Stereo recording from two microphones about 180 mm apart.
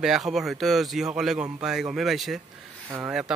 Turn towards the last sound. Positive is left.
turn(degrees=-5)  # may be behind; listen again after turning